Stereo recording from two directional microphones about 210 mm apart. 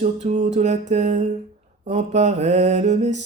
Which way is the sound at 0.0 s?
35° right (ahead or behind).